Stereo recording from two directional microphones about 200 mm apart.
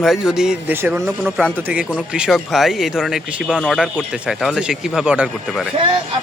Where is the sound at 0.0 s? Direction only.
Centre (ahead or behind).